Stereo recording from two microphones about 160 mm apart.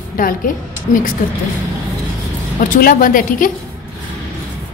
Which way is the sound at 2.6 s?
60° left (ahead or behind).